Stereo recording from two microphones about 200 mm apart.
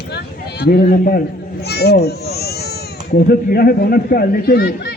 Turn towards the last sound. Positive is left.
turn(degrees=50)  # may be behind; listen again after turning